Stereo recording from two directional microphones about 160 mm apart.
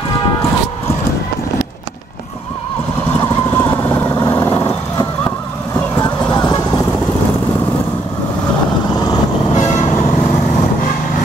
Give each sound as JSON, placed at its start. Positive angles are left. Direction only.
{"t": 3.1, "sound": "vehicle", "side_deg": 20}
{"t": 6.3, "sound": "vehicle", "side_deg": 25}
{"t": 9.1, "sound": "vehicle", "side_deg": 25}